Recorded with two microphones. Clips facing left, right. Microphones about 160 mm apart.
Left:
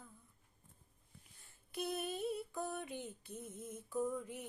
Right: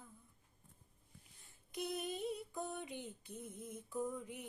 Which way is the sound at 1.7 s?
15° right (ahead or behind).